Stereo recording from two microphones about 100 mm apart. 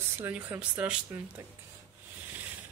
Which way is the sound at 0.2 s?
20° right (ahead or behind).